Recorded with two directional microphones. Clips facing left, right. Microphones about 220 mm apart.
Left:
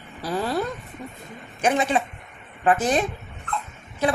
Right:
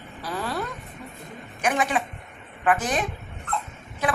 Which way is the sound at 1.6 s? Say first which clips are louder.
Left 3 dB; 25° left (ahead or behind).